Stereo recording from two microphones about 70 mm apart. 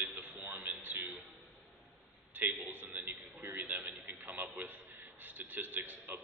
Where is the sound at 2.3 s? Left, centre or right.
Right.